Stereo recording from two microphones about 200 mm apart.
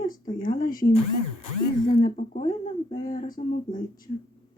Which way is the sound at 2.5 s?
20° left (ahead or behind).